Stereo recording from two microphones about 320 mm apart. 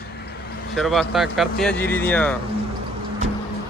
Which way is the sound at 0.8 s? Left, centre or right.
Centre.